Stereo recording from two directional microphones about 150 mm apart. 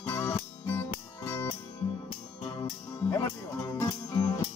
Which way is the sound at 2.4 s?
30° left (ahead or behind).